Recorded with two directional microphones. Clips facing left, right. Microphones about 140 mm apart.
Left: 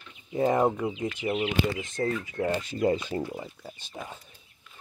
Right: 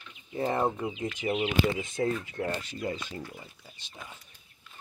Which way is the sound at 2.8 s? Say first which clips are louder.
Left 11 dB; 55° left (ahead or behind).